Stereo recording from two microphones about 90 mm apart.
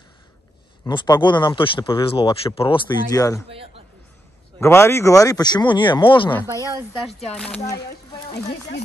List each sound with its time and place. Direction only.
0.8 s speech: 55° left (ahead or behind); by 2.8 s 90° left
3.1 s speech: 40° left (ahead or behind)
4.6 s speech: 30° left (ahead or behind); by 6.3 s 65° left (ahead or behind)
6.4 s speech: 35° right (ahead or behind)
7.0 s speech: centre (ahead or behind)
7.2 s speech: 10° left (ahead or behind)
7.7 s speech: 50° left (ahead or behind)